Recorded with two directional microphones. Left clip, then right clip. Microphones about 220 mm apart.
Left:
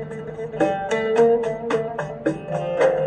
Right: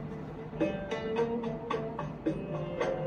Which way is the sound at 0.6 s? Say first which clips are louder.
Left 12 dB; 50° left (ahead or behind).